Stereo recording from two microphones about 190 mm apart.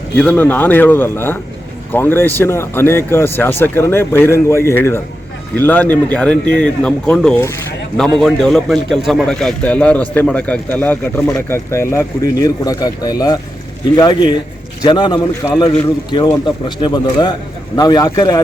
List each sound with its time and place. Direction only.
0.2 s a man's voice: 10° left (ahead or behind)